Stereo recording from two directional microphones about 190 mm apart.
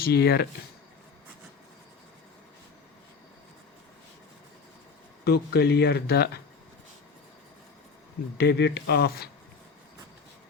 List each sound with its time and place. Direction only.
0.0 s speech: 55° left (ahead or behind)
5.2 s speech: 60° left (ahead or behind)
8.4 s speech: 60° left (ahead or behind)